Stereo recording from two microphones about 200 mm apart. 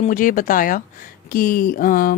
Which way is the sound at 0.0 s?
40° left (ahead or behind).